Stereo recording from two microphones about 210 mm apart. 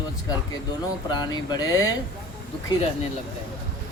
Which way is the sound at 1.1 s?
20° left (ahead or behind).